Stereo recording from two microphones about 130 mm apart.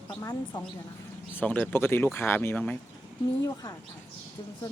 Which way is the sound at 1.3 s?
15° left (ahead or behind).